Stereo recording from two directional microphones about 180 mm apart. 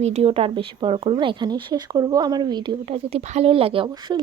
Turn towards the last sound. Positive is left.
turn(degrees=-30)  # may be behind; listen again after turning